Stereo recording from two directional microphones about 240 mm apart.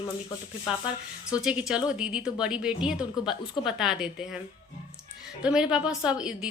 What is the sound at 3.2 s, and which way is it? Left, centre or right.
Speech, centre.